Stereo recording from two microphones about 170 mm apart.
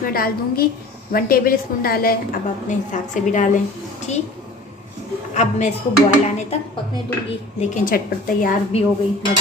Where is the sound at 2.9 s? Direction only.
45° left (ahead or behind).